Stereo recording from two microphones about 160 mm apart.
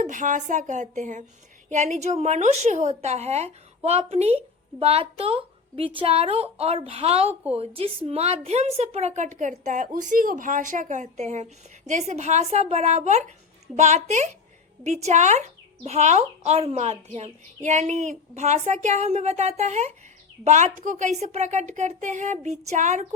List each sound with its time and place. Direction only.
0.0 s a woman's voice: 55° right (ahead or behind)